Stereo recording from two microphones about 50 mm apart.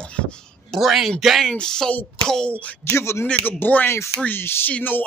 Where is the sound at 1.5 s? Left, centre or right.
Centre.